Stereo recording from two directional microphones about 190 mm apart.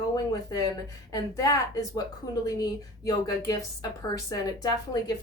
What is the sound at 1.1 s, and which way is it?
A woman's voice, 20° left (ahead or behind).